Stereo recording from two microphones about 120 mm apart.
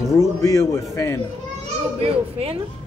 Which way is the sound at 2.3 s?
55° right (ahead or behind).